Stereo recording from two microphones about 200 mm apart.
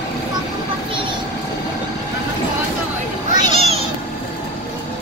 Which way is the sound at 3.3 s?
35° left (ahead or behind).